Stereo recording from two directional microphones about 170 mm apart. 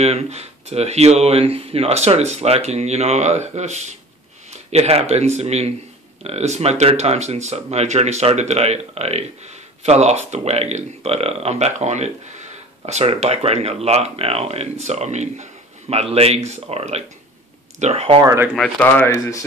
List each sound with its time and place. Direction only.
0.0 s speech: 40° right (ahead or behind)
18.2 s speech: 20° right (ahead or behind)
18.8 s speech: 10° left (ahead or behind)